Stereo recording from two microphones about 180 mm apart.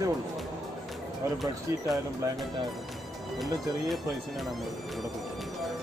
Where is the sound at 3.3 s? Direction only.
Centre (ahead or behind).